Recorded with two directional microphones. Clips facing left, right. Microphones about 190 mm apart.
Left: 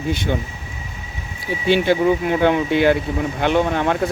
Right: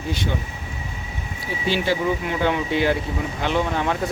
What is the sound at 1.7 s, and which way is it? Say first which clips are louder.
Speech: left 6 dB; 55° left (ahead or behind).